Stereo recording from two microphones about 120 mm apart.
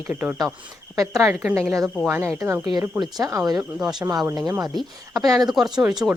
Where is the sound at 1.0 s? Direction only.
25° right (ahead or behind).